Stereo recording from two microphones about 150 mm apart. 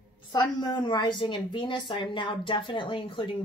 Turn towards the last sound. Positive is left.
turn(degrees=35)  # may be behind; listen again after turning